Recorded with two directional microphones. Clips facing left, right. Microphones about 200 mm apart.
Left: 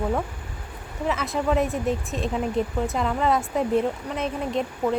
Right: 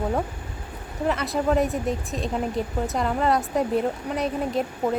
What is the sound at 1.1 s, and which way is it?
Speech, centre (ahead or behind).